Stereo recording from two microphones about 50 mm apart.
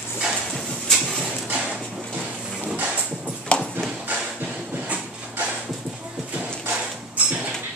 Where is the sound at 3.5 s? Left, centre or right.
Left.